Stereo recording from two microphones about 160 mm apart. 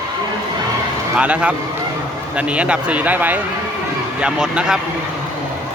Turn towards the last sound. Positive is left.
turn(degrees=-5)  # may be behind; listen again after turning